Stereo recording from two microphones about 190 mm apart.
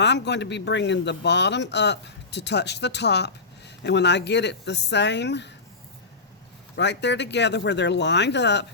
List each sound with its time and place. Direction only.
0.0 s speech: 65° left (ahead or behind)
6.7 s speech: 65° left (ahead or behind)